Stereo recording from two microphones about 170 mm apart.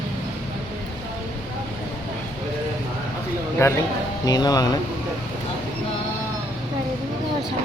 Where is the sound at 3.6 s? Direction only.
15° left (ahead or behind).